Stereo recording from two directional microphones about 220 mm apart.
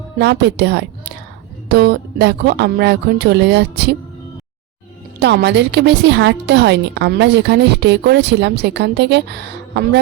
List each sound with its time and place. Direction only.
0.2 s a woman's voice: 50° right (ahead or behind)
5.2 s a woman's voice: 50° right (ahead or behind)